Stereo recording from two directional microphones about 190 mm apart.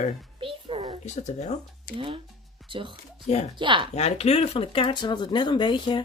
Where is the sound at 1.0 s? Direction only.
35° left (ahead or behind).